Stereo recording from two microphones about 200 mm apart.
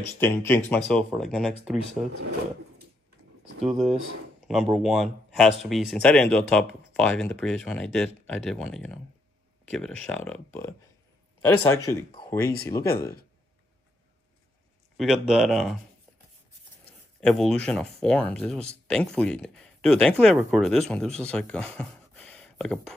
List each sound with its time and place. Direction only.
0.2 s speech: 10° left (ahead or behind)
3.6 s speech: centre (ahead or behind); by 12.9 s 15° left (ahead or behind)
15.0 s speech: 5° right (ahead or behind)
17.2 s speech: 5° left (ahead or behind)